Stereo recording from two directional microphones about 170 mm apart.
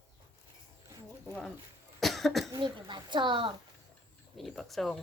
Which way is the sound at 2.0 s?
Centre (ahead or behind).